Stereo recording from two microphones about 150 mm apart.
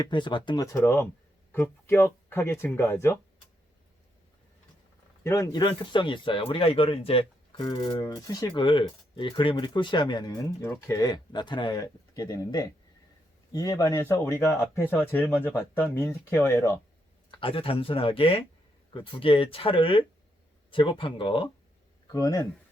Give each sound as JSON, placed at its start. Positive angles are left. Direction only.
{"t": 0.0, "sound": "speech", "side_deg": 30}
{"t": 5.2, "sound": "speech", "side_deg": 20}
{"t": 7.6, "sound": "speech", "side_deg": 25}
{"t": 17.4, "sound": "speech", "side_deg": 35}
{"t": 22.0, "sound": "speech", "side_deg": 25}